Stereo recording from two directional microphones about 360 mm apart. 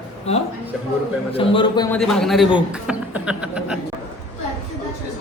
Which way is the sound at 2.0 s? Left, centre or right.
Centre.